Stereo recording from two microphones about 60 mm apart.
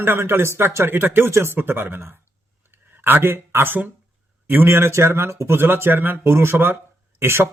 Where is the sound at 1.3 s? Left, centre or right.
Right.